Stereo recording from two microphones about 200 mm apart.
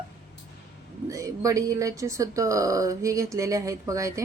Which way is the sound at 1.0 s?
15° right (ahead or behind).